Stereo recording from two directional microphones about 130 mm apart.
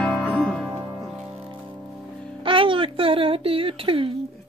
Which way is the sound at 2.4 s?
40° right (ahead or behind).